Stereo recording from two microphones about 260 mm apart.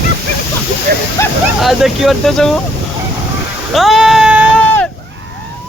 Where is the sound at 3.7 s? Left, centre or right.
Centre.